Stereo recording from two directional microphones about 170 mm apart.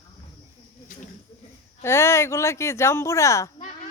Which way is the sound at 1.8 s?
15° left (ahead or behind).